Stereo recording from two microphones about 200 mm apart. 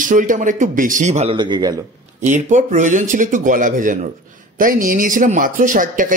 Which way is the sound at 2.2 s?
40° right (ahead or behind).